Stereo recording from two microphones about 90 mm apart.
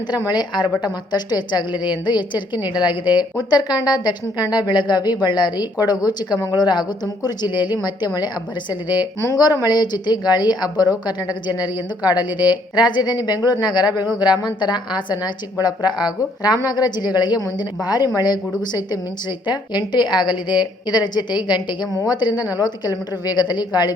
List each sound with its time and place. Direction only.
0.3 s a woman's voice: 55° left (ahead or behind)
9.2 s a woman's voice: 40° left (ahead or behind)